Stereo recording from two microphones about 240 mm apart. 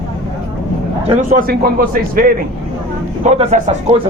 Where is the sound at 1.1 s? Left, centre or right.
Right.